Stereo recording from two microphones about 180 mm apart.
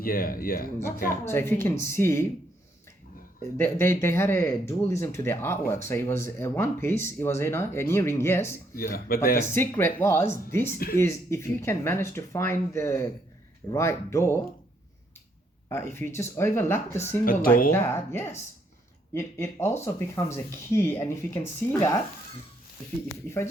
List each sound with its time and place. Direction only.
0.0 s speech: 55° left (ahead or behind)
1.1 s speech: 15° left (ahead or behind)
3.6 s speech: 15° left (ahead or behind)
8.7 s speech: 55° left (ahead or behind)
9.5 s speech: 15° left (ahead or behind)
15.7 s speech: 15° left (ahead or behind)
17.2 s speech: 50° left (ahead or behind)
17.7 s speech: 15° left (ahead or behind)